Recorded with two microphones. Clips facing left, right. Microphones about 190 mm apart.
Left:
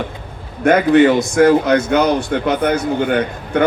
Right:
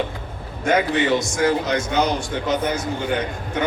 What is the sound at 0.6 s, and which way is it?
A man's voice, 60° left (ahead or behind).